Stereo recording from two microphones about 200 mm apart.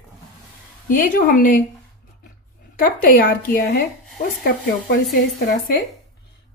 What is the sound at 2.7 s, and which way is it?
A woman's voice, 45° left (ahead or behind).